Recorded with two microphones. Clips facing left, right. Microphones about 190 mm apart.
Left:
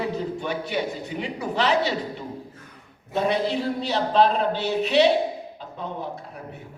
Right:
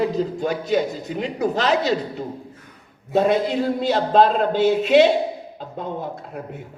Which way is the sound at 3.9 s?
50° right (ahead or behind).